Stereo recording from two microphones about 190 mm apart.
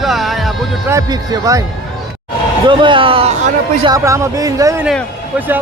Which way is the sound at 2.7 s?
25° right (ahead or behind).